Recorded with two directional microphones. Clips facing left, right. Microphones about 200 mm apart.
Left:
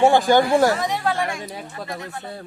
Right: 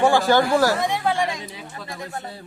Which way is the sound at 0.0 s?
20° left (ahead or behind).